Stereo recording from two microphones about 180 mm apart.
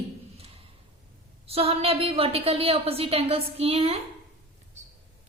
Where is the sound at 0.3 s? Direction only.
35° right (ahead or behind).